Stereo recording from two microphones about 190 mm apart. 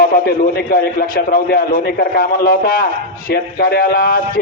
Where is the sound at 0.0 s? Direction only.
50° left (ahead or behind).